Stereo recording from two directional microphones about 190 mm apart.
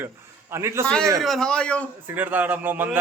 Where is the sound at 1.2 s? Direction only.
Centre (ahead or behind).